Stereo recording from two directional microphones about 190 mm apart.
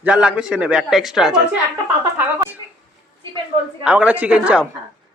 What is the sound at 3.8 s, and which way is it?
Speech, 5° right (ahead or behind).